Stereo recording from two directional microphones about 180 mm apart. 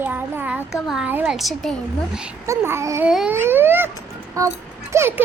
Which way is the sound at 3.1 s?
5° right (ahead or behind).